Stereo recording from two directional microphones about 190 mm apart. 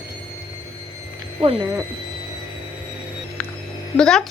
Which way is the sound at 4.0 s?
5° left (ahead or behind).